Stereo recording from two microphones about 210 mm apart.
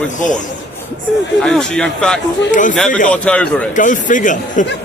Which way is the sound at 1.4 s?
5° left (ahead or behind).